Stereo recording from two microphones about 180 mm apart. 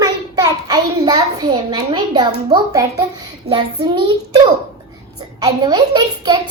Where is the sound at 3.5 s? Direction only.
30° right (ahead or behind).